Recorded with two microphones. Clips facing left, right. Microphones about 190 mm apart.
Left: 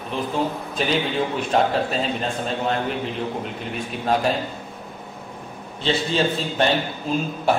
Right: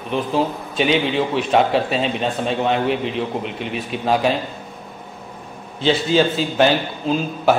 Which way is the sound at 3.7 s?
Centre (ahead or behind).